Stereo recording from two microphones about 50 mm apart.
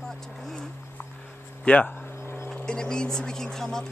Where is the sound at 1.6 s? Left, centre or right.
Left.